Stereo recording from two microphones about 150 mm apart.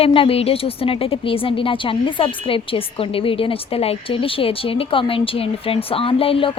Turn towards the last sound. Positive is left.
turn(degrees=40)  # may be behind; listen again after turning